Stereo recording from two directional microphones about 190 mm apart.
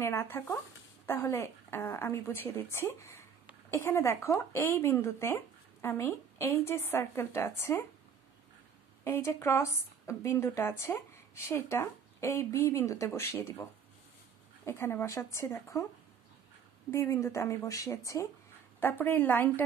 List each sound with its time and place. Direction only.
0.0 s speech: 15° left (ahead or behind)
9.0 s speech: 15° left (ahead or behind)
16.9 s speech: 15° left (ahead or behind)